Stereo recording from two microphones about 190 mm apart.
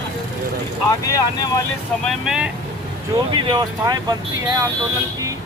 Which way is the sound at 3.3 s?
25° right (ahead or behind).